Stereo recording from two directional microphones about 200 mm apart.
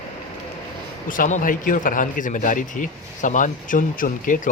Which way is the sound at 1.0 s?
40° left (ahead or behind).